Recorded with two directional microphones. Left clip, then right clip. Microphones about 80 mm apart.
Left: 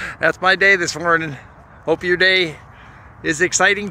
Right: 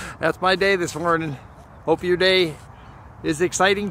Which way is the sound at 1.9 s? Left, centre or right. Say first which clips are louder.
Left 3 dB; right.